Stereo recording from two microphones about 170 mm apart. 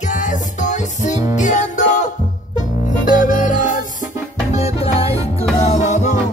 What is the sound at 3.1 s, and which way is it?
Music, 50° left (ahead or behind).